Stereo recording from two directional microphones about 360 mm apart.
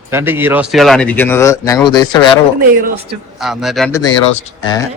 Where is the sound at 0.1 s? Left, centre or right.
Centre.